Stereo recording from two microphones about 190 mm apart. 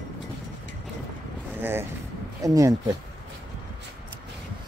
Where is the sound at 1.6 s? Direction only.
10° right (ahead or behind).